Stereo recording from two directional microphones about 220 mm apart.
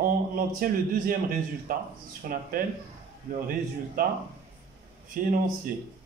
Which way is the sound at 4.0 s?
40° right (ahead or behind).